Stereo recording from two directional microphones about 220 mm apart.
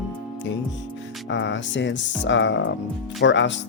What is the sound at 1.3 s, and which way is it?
Speech, 55° left (ahead or behind).